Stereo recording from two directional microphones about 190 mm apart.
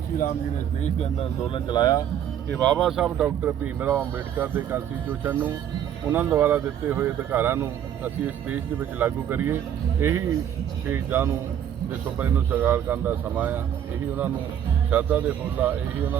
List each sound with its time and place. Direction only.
0.8 s speech: 35° left (ahead or behind)
1.5 s speech: 25° left (ahead or behind)
2.5 s speech: 5° left (ahead or behind); by 13.6 s 10° right (ahead or behind)
14.8 s speech: 10° right (ahead or behind)